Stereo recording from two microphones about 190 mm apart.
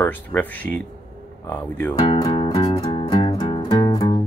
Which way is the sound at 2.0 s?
30° left (ahead or behind).